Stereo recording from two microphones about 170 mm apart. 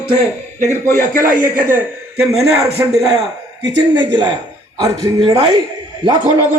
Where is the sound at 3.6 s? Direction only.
25° right (ahead or behind).